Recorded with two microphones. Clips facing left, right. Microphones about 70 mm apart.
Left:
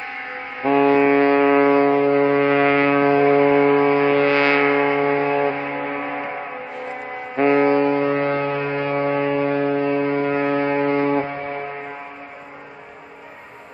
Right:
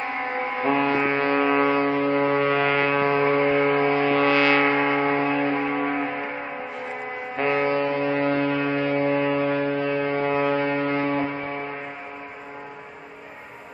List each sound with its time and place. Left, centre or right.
0.6 s foghorn: centre
1.2 s foghorn: left
3.3 s a sound: centre
3.6 s vehicle: centre
4.0 s vehicle: left
4.6 s a sound: centre
7.3 s music: left
7.7 s a sound: left
10.5 s foghorn: left